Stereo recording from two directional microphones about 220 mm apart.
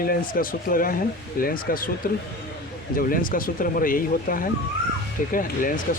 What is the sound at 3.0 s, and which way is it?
Speech, 40° left (ahead or behind).